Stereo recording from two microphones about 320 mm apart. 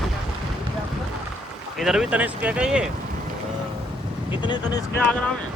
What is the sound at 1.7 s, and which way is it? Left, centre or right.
Speech, centre.